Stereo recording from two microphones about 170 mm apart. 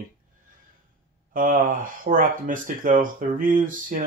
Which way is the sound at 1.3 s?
55° right (ahead or behind).